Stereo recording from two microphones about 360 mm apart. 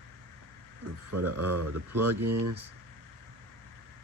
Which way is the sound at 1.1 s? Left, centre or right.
Right.